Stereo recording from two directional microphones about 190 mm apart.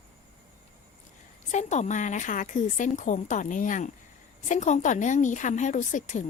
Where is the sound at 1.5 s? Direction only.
40° left (ahead or behind).